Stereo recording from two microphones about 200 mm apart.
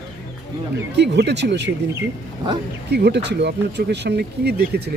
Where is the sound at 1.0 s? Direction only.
55° right (ahead or behind).